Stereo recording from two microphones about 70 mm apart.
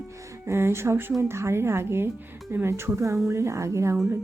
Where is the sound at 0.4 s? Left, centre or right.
Right.